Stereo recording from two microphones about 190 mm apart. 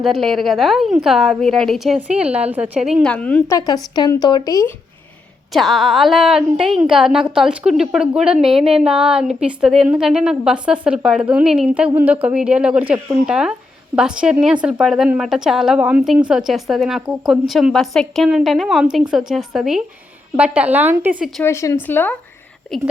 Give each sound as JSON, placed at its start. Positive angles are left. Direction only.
{"t": 0.0, "sound": "a woman's voice", "side_deg": 0}
{"t": 3.9, "sound": "speech", "side_deg": 20}
{"t": 5.5, "sound": "a woman's voice", "side_deg": 0}
{"t": 21.4, "sound": "speech", "side_deg": 15}